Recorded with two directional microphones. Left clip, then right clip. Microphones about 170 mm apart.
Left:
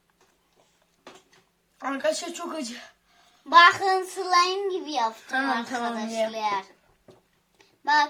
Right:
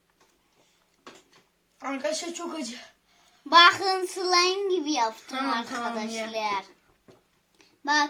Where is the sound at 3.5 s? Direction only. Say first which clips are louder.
Left 1 dB; 10° right (ahead or behind).